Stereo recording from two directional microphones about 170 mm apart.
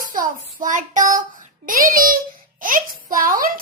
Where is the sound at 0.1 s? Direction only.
50° right (ahead or behind).